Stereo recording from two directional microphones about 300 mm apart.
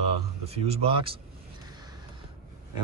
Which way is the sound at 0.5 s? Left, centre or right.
Centre.